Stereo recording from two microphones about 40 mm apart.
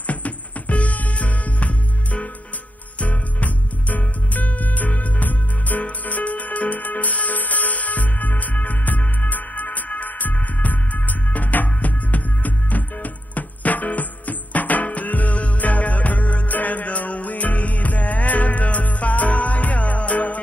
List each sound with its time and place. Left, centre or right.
0.0 s music: left